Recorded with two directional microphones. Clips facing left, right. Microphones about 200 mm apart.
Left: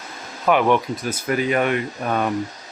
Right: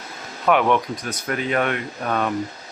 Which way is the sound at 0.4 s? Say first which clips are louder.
Left 1 dB; centre (ahead or behind).